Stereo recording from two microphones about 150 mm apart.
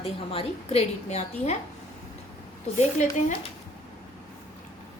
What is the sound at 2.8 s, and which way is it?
Speech, 50° left (ahead or behind).